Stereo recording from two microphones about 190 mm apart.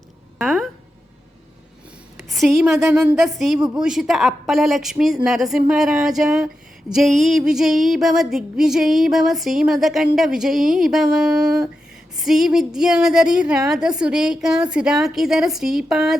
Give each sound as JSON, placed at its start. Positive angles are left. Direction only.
{"t": 0.3, "sound": "a sound", "side_deg": -5}
{"t": 2.3, "sound": "a woman's voice", "side_deg": 0}
{"t": 2.6, "sound": "a woman's voice", "side_deg": -10}